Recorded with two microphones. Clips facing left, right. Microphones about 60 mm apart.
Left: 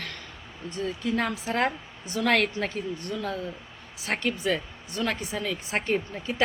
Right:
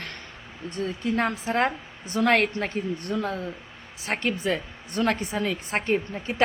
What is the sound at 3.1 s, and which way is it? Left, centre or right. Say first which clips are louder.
Speech: right 4 dB; right.